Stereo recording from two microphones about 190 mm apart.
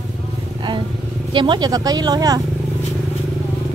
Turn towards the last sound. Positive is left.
turn(degrees=-20)  # may be behind; listen again after turning